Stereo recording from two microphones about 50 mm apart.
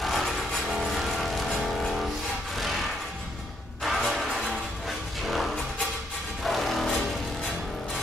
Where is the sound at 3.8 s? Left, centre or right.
Centre.